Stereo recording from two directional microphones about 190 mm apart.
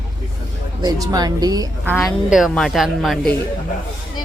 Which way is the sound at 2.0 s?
Centre (ahead or behind).